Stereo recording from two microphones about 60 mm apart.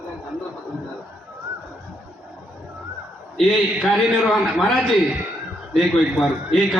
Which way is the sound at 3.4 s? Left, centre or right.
Centre.